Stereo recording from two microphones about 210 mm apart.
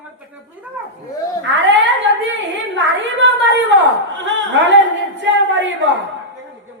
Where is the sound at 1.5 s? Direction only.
60° right (ahead or behind).